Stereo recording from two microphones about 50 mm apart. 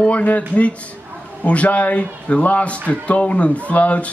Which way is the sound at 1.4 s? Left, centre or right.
Left.